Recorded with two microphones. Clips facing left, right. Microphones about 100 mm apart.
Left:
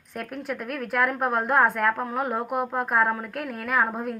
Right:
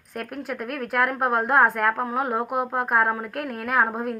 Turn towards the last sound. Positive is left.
turn(degrees=-5)  # may be behind; listen again after turning